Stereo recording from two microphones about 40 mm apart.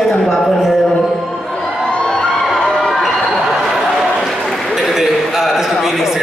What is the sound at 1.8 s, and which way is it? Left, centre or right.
Crowd, left.